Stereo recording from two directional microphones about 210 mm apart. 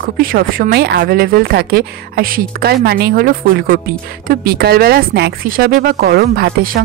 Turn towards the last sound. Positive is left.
turn(degrees=-45)  # may be behind; listen again after turning